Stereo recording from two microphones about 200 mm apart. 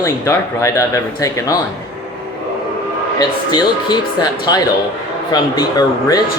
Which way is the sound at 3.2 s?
20° left (ahead or behind).